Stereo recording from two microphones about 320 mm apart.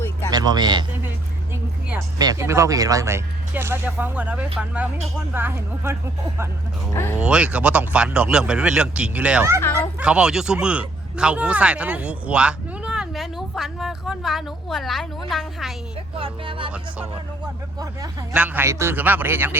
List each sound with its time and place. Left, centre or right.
0.3 s a sound: centre
1.9 s speech: centre
6.9 s speech: centre
7.2 s speech: centre
9.6 s speech: centre
10.0 s speech: centre
16.1 s speech: centre
17.7 s speech: centre